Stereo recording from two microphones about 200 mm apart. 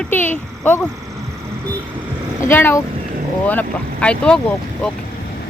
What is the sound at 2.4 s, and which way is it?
Speech, 10° left (ahead or behind).